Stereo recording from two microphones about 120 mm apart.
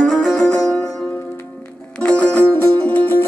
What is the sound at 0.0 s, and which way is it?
Music, centre (ahead or behind).